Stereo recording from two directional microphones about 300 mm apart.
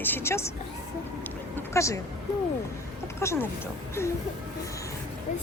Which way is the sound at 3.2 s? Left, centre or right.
Centre.